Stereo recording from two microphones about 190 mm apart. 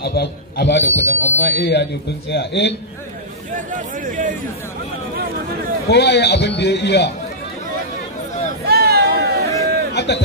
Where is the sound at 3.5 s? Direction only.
45° right (ahead or behind).